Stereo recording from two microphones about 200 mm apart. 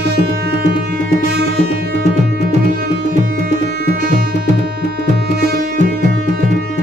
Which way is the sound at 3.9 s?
45° right (ahead or behind).